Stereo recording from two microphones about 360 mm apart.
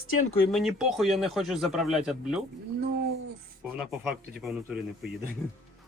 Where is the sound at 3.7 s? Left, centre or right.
Centre.